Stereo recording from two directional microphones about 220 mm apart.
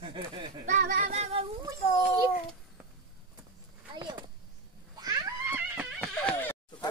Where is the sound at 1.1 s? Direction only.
30° right (ahead or behind).